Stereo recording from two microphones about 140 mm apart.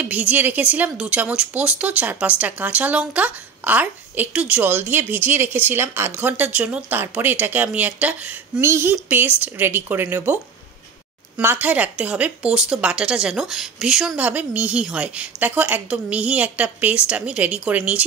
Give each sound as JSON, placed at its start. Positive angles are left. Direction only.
{"t": 0.0, "sound": "a woman's voice", "side_deg": -10}
{"t": 11.3, "sound": "a woman's voice", "side_deg": -10}